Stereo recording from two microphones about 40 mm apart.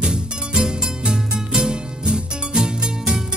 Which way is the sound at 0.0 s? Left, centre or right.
Right.